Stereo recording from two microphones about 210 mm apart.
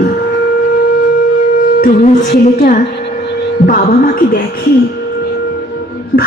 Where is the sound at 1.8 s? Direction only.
35° left (ahead or behind).